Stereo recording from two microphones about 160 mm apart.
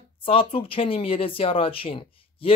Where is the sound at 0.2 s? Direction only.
35° left (ahead or behind).